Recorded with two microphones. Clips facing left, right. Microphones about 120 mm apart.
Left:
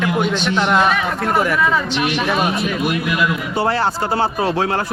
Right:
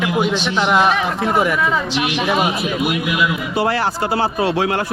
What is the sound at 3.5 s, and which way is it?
Speech, 30° left (ahead or behind).